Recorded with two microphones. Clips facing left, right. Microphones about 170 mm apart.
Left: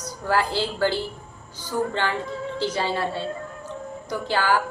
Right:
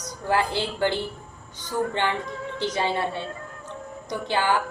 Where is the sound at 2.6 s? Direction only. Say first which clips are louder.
Even; 20° right (ahead or behind).